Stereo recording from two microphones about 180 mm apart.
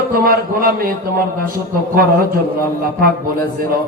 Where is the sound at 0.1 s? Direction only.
55° right (ahead or behind).